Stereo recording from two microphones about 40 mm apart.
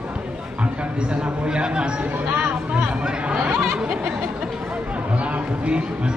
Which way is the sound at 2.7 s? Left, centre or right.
Right.